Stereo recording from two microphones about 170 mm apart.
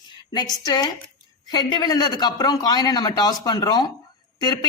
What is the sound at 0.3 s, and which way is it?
A woman's voice, 25° left (ahead or behind).